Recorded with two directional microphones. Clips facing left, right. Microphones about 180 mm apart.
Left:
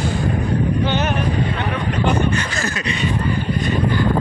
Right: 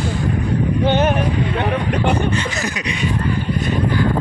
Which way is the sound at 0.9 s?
55° right (ahead or behind).